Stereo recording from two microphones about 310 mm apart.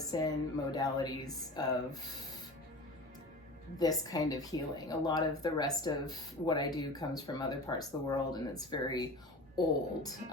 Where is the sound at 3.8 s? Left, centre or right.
Centre.